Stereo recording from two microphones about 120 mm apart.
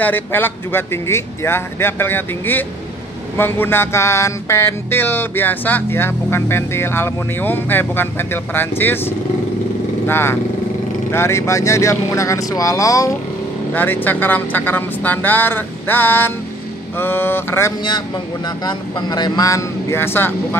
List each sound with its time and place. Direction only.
0.0 s music: 15° left (ahead or behind)
10.0 s speech: 20° left (ahead or behind)
11.1 s music: 20° left (ahead or behind)
13.7 s speech: 15° left (ahead or behind)
17.0 s music: 20° left (ahead or behind)
18.6 s speech: 35° left (ahead or behind); by 20.3 s 20° left (ahead or behind)